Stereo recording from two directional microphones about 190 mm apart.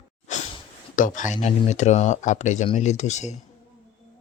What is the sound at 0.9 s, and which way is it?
Speech, 40° left (ahead or behind).